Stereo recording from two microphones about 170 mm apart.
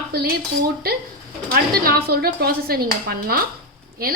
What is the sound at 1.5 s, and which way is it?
A woman's voice, 65° right (ahead or behind).